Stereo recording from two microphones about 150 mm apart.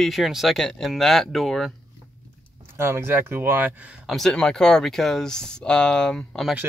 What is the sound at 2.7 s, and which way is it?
Speech, 15° right (ahead or behind).